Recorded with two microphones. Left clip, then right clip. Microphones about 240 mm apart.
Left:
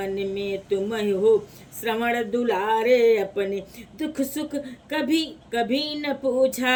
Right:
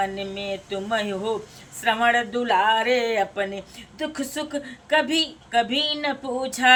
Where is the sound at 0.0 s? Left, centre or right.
Centre.